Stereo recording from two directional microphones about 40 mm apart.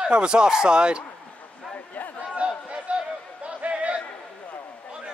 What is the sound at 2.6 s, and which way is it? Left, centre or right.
Chatter, right.